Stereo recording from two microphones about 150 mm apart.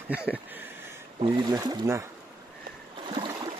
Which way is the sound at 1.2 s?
35° right (ahead or behind).